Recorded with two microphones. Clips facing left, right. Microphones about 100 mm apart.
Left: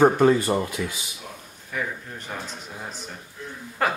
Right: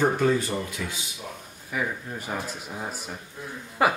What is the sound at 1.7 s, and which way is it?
Speech, 10° right (ahead or behind).